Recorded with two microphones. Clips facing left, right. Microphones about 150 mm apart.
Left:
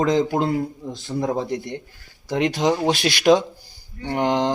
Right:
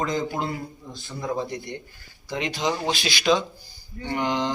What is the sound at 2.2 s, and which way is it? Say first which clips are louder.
Mantra: left 7 dB; 65° left (ahead or behind).